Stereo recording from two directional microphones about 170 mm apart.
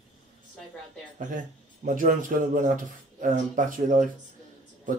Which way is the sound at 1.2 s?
50° right (ahead or behind).